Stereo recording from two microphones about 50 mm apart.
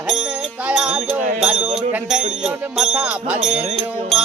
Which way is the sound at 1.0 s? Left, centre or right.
Centre.